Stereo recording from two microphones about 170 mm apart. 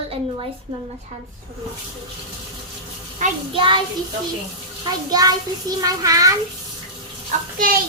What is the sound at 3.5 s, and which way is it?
Speech, 30° right (ahead or behind).